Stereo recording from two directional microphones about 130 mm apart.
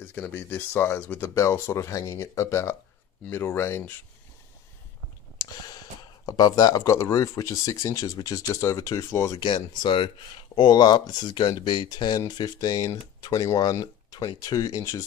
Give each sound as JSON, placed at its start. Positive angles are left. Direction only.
{"t": 0.0, "sound": "a sound", "side_deg": 10}
{"t": 0.3, "sound": "speech", "side_deg": 15}
{"t": 5.4, "sound": "speech", "side_deg": 30}
{"t": 9.4, "sound": "speech", "side_deg": 35}